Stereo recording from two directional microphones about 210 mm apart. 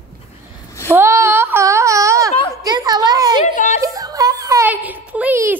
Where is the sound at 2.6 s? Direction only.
20° right (ahead or behind).